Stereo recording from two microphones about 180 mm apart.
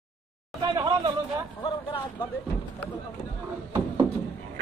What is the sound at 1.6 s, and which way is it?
Vehicle, 25° left (ahead or behind).